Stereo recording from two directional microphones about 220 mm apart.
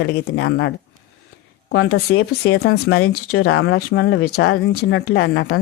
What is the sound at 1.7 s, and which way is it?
Speech, 70° left (ahead or behind).